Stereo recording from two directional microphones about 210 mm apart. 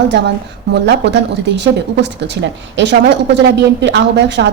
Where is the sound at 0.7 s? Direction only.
55° right (ahead or behind).